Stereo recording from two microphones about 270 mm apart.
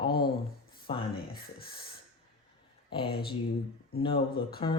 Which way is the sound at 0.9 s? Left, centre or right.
Centre.